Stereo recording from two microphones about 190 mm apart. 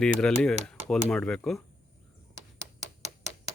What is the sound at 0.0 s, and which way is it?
Speech, 5° left (ahead or behind).